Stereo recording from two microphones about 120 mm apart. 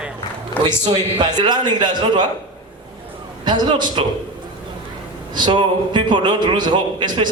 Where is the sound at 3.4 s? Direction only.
40° right (ahead or behind).